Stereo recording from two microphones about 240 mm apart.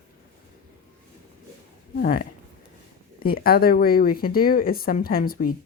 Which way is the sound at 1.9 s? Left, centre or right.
Left.